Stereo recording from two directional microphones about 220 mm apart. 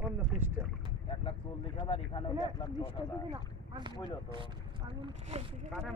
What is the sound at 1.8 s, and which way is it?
Speech, 25° left (ahead or behind).